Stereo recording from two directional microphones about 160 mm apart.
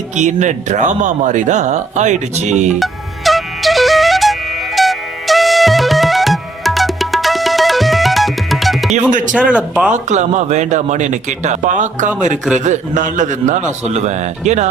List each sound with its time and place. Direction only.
0.2 s speech: 50° right (ahead or behind)
2.7 s music: centre (ahead or behind)
9.5 s speech: 5° right (ahead or behind)
9.9 s speech: 50° right (ahead or behind)